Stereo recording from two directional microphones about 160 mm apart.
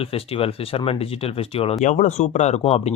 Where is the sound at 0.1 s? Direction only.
35° left (ahead or behind).